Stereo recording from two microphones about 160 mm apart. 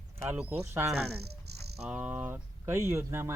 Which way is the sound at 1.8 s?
5° right (ahead or behind).